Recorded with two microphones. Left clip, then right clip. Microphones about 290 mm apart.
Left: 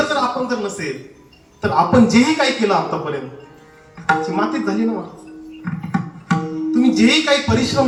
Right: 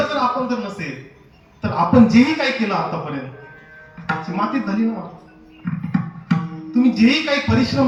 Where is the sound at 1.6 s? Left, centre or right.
Centre.